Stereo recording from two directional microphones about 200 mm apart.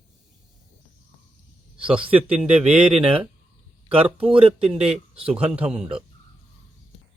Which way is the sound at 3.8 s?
30° right (ahead or behind).